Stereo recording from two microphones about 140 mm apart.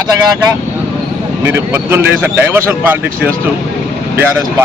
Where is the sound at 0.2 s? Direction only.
25° right (ahead or behind).